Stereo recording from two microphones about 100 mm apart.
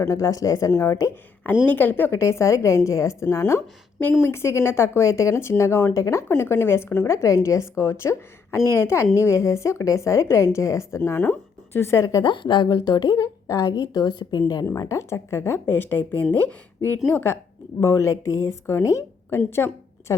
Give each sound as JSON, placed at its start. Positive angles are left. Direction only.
{"t": 0.0, "sound": "a woman's voice", "side_deg": 35}
{"t": 1.6, "sound": "speech", "side_deg": 20}
{"t": 12.2, "sound": "speech", "side_deg": 50}
{"t": 12.6, "sound": "a woman's voice", "side_deg": 40}
{"t": 17.7, "sound": "speech", "side_deg": 30}
{"t": 19.5, "sound": "a sound", "side_deg": 25}